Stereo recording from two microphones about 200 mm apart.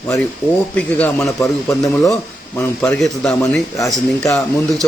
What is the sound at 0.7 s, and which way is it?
A man's voice, 5° left (ahead or behind).